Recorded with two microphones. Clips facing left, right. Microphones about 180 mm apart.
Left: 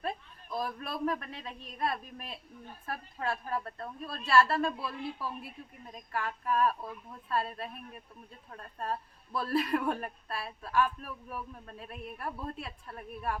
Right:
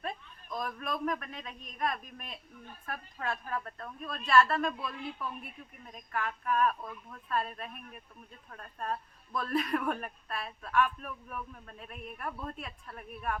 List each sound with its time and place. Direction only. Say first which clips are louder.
0.6 s a woman's voice: left 1 dB; 30° left (ahead or behind)